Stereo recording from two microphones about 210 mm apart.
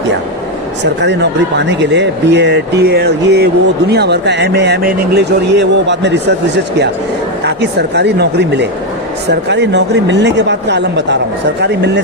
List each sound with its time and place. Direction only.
1.0 s speech: 55° right (ahead or behind)
7.4 s speech: 55° right (ahead or behind)